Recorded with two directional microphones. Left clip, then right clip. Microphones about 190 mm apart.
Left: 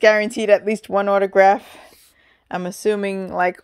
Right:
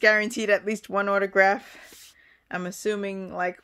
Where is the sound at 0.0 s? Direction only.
25° left (ahead or behind).